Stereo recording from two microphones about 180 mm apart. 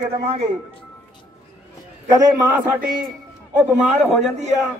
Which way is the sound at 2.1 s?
15° right (ahead or behind).